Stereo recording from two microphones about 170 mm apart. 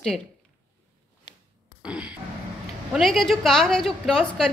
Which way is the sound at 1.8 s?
5° right (ahead or behind).